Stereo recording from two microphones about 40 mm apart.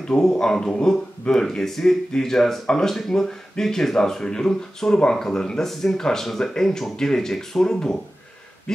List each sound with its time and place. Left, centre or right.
0.2 s speech: centre